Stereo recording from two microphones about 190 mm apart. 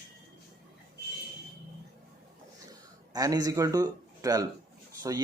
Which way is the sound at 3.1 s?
20° right (ahead or behind).